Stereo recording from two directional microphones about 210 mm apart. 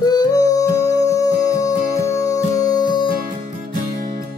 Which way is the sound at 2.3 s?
20° left (ahead or behind).